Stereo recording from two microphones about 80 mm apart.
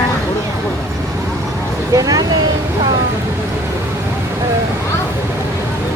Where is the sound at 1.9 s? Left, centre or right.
Right.